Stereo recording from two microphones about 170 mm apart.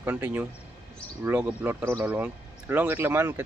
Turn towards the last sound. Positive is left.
turn(degrees=-15)  # may be behind; listen again after turning